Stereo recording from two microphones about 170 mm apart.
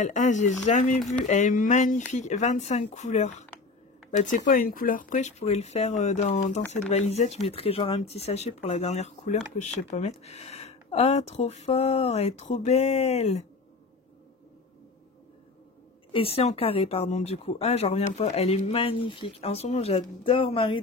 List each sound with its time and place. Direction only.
0.0 s speech: 45° left (ahead or behind)
0.9 s speech: centre (ahead or behind)
1.2 s speech: 50° left (ahead or behind)
16.1 s speech: 35° left (ahead or behind)